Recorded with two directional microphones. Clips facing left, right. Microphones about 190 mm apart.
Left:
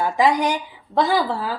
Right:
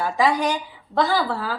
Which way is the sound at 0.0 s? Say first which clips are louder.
Left 2 dB; 15° left (ahead or behind).